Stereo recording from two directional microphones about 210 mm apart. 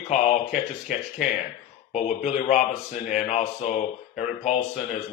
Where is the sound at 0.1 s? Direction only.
35° left (ahead or behind).